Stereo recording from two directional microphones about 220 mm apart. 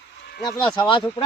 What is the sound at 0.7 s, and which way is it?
Speech, 20° left (ahead or behind).